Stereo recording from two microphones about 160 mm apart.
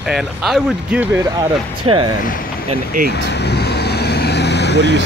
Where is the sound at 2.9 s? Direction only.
60° right (ahead or behind).